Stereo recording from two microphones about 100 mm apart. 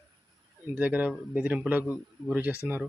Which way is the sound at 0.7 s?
15° right (ahead or behind).